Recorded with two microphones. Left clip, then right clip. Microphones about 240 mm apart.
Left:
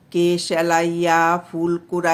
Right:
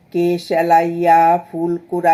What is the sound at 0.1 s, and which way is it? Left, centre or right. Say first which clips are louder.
Speech: right 2 dB; centre.